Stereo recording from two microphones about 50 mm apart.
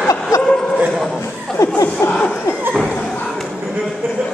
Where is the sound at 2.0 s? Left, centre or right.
Left.